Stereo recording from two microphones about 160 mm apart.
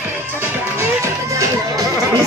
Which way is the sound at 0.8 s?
20° right (ahead or behind).